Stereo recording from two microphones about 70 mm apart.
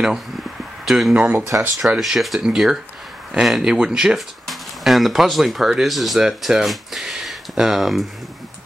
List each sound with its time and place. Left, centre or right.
0.8 s speech: centre
1.6 s speech: right
2.0 s speech: centre